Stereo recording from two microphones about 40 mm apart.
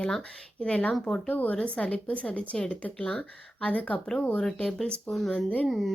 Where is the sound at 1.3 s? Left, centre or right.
Left.